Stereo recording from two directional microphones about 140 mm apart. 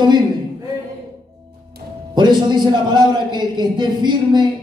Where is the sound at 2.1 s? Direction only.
30° right (ahead or behind).